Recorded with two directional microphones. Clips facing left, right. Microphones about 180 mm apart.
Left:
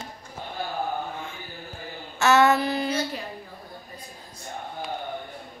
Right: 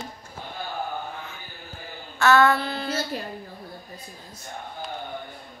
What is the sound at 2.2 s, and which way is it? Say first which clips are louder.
Speech: even; 20° left (ahead or behind).